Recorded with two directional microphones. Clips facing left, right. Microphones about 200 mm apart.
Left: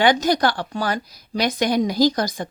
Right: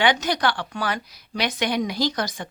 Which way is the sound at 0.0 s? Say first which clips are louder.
Left 4 dB; 40° left (ahead or behind).